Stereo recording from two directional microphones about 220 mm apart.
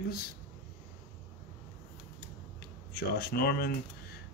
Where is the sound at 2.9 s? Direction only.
45° left (ahead or behind).